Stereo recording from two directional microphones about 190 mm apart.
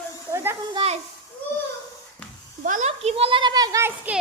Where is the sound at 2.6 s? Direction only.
40° right (ahead or behind); by 4.1 s 15° right (ahead or behind).